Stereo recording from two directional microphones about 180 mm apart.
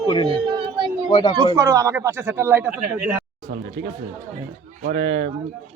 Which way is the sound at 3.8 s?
65° right (ahead or behind).